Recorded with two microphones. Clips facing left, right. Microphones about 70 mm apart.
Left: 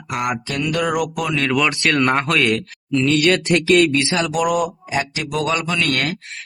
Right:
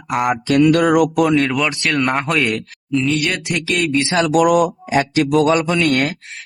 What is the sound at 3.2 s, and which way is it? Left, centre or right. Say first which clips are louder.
Speech: left 5 dB; centre.